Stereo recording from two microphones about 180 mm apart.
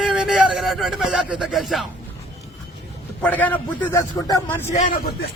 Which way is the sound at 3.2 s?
10° left (ahead or behind).